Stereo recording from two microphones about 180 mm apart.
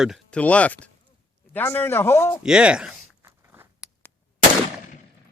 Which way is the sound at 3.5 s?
10° right (ahead or behind).